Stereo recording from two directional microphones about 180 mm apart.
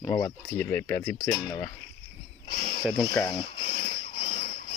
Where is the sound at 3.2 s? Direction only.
30° left (ahead or behind).